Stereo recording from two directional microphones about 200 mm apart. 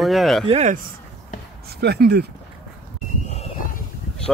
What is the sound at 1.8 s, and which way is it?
Speech, 55° right (ahead or behind).